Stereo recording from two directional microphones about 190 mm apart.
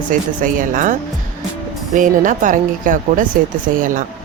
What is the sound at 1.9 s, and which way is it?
Speech, 45° right (ahead or behind).